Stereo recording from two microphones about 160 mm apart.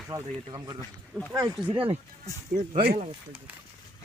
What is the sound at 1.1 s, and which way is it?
Speech, centre (ahead or behind).